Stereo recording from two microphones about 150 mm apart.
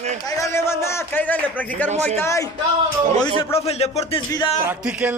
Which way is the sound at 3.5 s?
45° left (ahead or behind).